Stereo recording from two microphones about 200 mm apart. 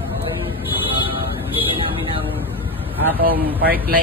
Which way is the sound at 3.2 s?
45° right (ahead or behind).